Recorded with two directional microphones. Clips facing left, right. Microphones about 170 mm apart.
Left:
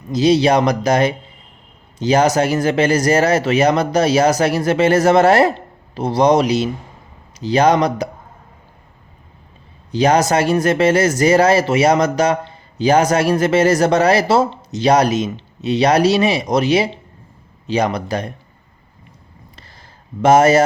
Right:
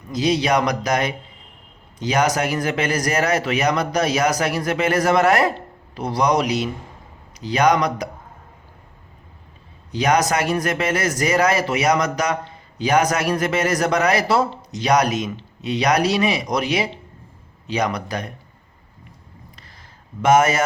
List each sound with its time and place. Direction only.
0.1 s speech: 30° left (ahead or behind)
9.9 s speech: 30° left (ahead or behind)
20.2 s speech: 30° left (ahead or behind)